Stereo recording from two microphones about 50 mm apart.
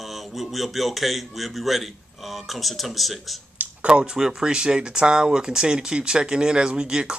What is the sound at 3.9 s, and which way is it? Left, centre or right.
Speech, centre.